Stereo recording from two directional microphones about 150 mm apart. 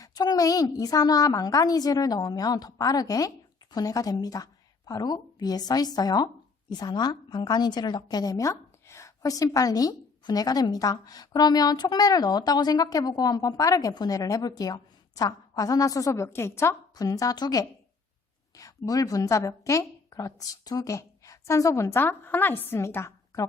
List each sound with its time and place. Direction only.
0.0 s a woman's voice: 25° left (ahead or behind)